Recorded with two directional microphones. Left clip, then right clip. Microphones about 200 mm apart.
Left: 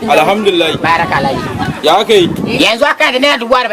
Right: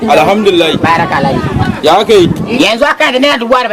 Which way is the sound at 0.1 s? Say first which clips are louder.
Right 2 dB; 15° right (ahead or behind).